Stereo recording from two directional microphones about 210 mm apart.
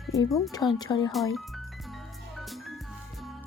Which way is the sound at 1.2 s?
Centre (ahead or behind).